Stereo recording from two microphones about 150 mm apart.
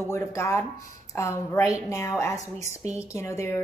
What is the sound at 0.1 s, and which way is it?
Speech, 20° left (ahead or behind).